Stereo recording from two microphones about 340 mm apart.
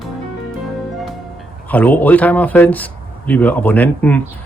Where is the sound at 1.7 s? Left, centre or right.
Centre.